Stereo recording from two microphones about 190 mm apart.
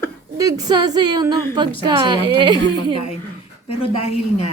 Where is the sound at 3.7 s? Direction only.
30° left (ahead or behind).